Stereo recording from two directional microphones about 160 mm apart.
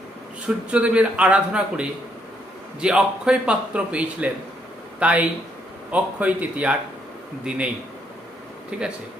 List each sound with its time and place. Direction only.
0.4 s a man's voice: 10° right (ahead or behind)
8.7 s a man's voice: 5° right (ahead or behind)